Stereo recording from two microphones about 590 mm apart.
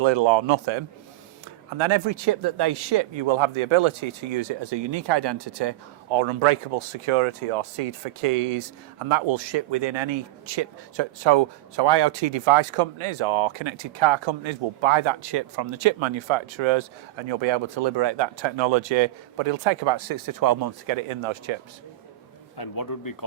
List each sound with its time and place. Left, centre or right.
0.0 s speech: right
22.5 s speech: left